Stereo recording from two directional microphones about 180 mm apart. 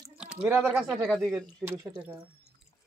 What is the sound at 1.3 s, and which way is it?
Speech, 15° right (ahead or behind).